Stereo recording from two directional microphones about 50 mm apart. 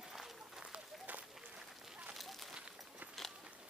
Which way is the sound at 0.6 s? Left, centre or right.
Right.